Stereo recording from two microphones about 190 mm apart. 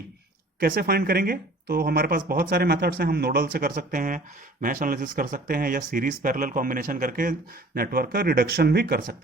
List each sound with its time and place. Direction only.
0.6 s speech: 50° right (ahead or behind)